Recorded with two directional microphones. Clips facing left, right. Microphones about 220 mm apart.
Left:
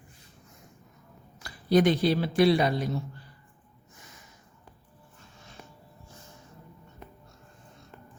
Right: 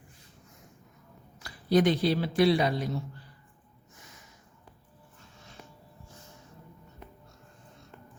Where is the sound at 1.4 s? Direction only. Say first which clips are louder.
Left 2 dB; 50° left (ahead or behind).